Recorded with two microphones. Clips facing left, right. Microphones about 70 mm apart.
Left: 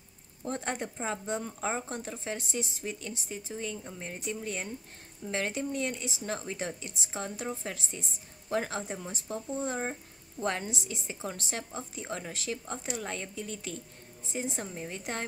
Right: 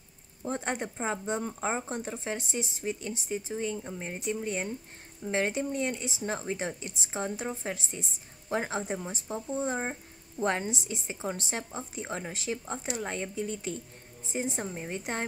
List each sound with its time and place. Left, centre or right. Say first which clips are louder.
0.5 s speech: right 2 dB; centre